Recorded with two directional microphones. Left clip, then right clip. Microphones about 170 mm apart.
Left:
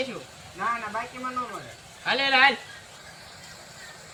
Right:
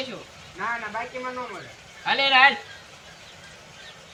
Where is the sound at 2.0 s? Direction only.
5° left (ahead or behind).